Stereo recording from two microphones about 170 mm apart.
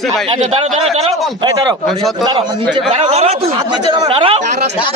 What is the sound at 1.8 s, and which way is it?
Speech, centre (ahead or behind).